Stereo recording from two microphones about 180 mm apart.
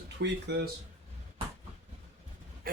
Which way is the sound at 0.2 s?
70° right (ahead or behind).